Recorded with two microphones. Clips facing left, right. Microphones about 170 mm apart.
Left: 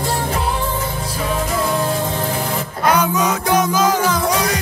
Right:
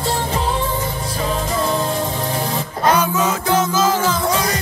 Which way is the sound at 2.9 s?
15° left (ahead or behind).